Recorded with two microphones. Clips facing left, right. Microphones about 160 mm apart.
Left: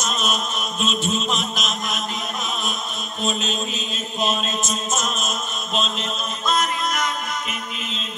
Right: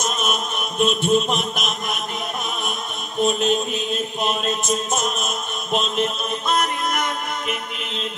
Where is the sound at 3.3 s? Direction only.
55° right (ahead or behind).